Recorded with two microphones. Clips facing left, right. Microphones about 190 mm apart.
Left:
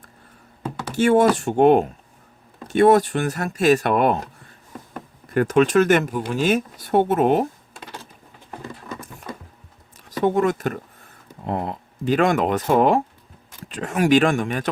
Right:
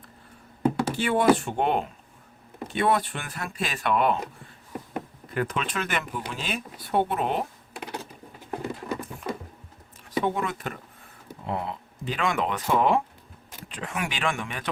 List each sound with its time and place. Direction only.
0.9 s speech: 45° left (ahead or behind)
5.3 s speech: 45° left (ahead or behind)
8.4 s horse: 10° right (ahead or behind)
10.1 s speech: 45° left (ahead or behind)